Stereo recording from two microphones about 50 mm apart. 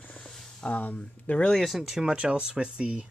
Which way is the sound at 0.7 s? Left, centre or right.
Left.